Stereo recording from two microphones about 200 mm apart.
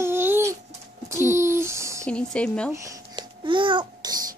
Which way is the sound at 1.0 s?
15° right (ahead or behind).